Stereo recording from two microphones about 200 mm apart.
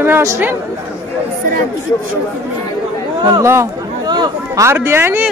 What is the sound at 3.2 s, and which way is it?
A man's voice, 15° right (ahead or behind).